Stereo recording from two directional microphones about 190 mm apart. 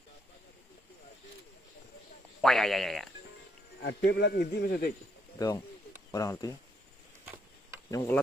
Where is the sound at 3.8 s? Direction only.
65° left (ahead or behind).